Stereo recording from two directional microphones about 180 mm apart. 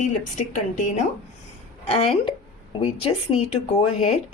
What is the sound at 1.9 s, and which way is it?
Speech, 30° left (ahead or behind).